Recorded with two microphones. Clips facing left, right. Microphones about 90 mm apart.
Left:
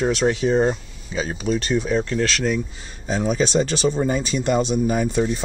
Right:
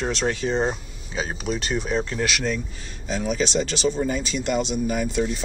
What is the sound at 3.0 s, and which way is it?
Speech, 35° left (ahead or behind).